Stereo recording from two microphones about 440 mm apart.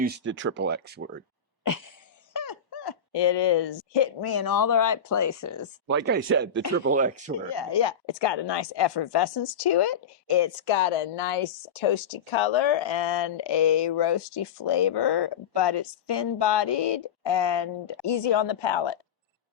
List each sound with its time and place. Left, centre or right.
0.0 s speech: right
1.6 s a sound: left
2.3 s speech: left
5.9 s speech: right
7.3 s speech: left